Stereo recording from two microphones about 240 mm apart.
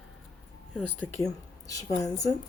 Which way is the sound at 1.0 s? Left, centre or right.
Centre.